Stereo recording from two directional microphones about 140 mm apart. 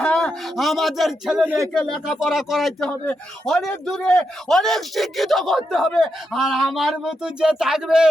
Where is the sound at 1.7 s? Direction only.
Centre (ahead or behind).